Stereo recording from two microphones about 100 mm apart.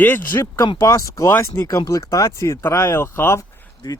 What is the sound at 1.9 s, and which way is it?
Speech, 35° left (ahead or behind).